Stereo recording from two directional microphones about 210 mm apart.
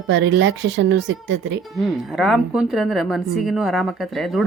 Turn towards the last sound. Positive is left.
turn(degrees=0)  # may be behind; listen again after turning